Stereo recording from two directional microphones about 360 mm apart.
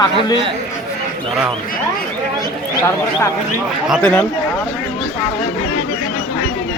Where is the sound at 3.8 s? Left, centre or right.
Centre.